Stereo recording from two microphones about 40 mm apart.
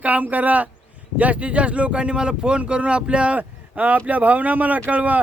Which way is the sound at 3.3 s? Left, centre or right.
Right.